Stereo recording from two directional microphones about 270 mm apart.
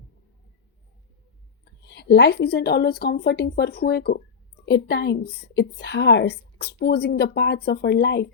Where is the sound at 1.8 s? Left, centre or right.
Left.